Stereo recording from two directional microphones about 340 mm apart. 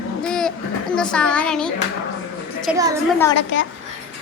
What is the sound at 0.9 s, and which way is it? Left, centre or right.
Speech, centre.